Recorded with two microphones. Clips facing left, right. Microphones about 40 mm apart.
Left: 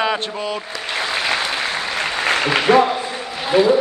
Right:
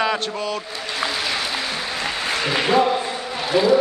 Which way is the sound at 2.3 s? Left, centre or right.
Left.